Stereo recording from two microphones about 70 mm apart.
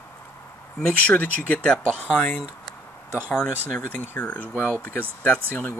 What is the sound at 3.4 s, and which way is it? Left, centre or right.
Speech, left.